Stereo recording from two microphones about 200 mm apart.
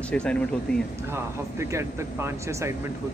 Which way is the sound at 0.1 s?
5° left (ahead or behind).